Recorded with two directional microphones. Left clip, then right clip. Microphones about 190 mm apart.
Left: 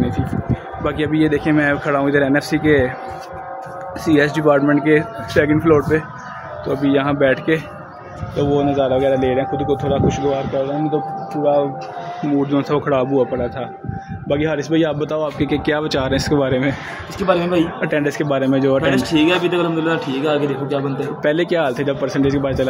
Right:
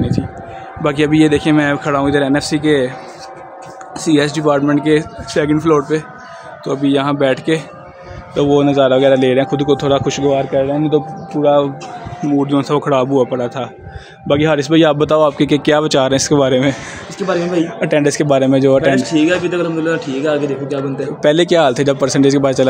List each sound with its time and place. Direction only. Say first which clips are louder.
0.8 s a man's voice: right 6 dB; 60° right (ahead or behind); by 2.0 s 40° right (ahead or behind)
2.0 s speech: right 1 dB; 20° right (ahead or behind)
4.1 s a man's voice: right 2 dB; 35° right (ahead or behind)
4.4 s speech: right 1 dB; 15° right (ahead or behind)
6.6 s a man's voice: right 2 dB; 40° right (ahead or behind)
8.4 s a man's voice: right 5 dB; 45° right (ahead or behind)
12.5 s a man's voice: right 4 dB; 40° right (ahead or behind)
15.9 s speech: right 6 dB; 20° right (ahead or behind)
16.3 s a man's voice: right 5 dB; 30° right (ahead or behind)
17.2 s a man's voice: even; centre (ahead or behind)
17.7 s speech: right 5 dB; 20° right (ahead or behind)
18.9 s a man's voice: right 3 dB; centre (ahead or behind)
21.2 s a man's voice: right 7 dB; 30° right (ahead or behind)